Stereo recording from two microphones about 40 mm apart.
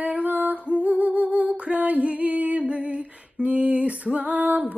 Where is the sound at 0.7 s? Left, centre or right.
Right.